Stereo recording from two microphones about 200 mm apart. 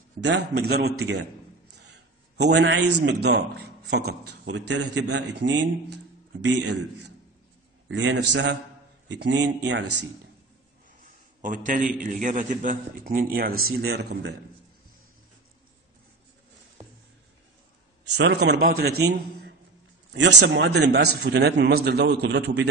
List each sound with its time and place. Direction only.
0.2 s a man's voice: 60° right (ahead or behind)
1.8 s a sound: 60° right (ahead or behind)
3.1 s a man's voice: 60° right (ahead or behind)
11.4 s a man's voice: 40° right (ahead or behind)
18.0 s a man's voice: 60° right (ahead or behind)